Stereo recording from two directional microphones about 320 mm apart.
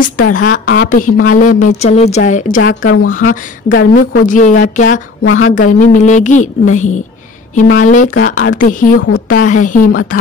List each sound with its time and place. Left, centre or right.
0.0 s a woman's voice: left
2.8 s speech: left
3.1 s a woman's voice: left
4.3 s a woman's voice: left
5.2 s a woman's voice: left
5.5 s a woman's voice: left
8.9 s a woman's voice: left
9.3 s a woman's voice: left